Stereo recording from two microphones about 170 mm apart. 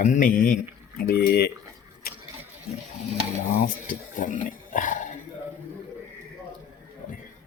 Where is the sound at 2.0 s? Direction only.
60° left (ahead or behind).